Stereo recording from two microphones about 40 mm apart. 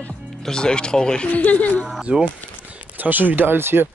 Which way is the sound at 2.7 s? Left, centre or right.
Right.